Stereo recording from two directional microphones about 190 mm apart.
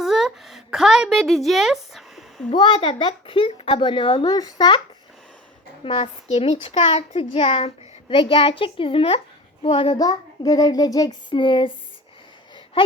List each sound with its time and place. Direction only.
0.0 s a sound: centre (ahead or behind)
2.5 s speech: 30° left (ahead or behind)
5.8 s speech: 30° left (ahead or behind)